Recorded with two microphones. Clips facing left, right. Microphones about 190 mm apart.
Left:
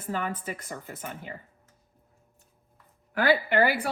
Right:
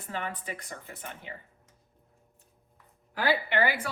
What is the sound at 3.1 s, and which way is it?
Speech, 55° left (ahead or behind).